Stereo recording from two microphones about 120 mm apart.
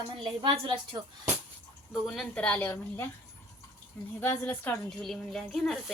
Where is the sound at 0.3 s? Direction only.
40° right (ahead or behind).